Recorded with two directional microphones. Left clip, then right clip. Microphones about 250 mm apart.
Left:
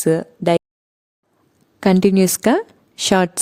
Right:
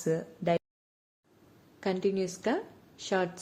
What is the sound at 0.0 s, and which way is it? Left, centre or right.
Speech, left.